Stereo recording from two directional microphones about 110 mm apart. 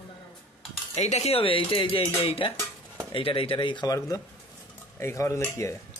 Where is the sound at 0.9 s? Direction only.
75° left (ahead or behind); by 4.2 s 35° left (ahead or behind).